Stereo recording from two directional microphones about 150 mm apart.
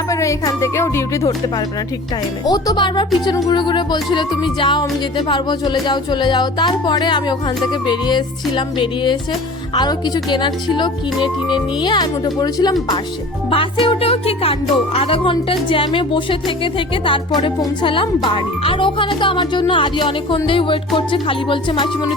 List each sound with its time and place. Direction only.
0.1 s music: 20° left (ahead or behind)
3.2 s speech: 30° left (ahead or behind)
5.8 s music: 30° left (ahead or behind)
13.5 s speech: 35° left (ahead or behind)